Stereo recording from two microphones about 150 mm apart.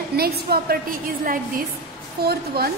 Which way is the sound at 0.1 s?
90° right.